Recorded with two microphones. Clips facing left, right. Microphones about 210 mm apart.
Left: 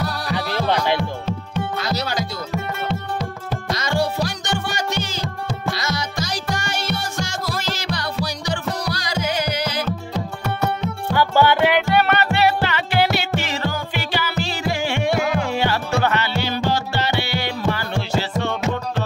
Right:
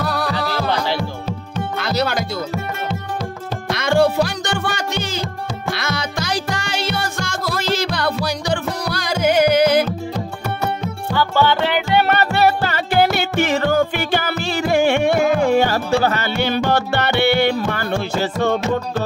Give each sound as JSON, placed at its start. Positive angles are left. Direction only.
{"t": 0.0, "sound": "music", "side_deg": -55}
{"t": 0.4, "sound": "music", "side_deg": 20}
{"t": 0.9, "sound": "music", "side_deg": -10}
{"t": 1.8, "sound": "music", "side_deg": -55}
{"t": 3.7, "sound": "music", "side_deg": -55}
{"t": 11.1, "sound": "music", "side_deg": 10}
{"t": 12.1, "sound": "music", "side_deg": -40}
{"t": 16.3, "sound": "music", "side_deg": -60}